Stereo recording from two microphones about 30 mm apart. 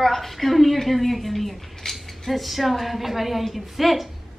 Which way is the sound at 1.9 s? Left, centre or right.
Centre.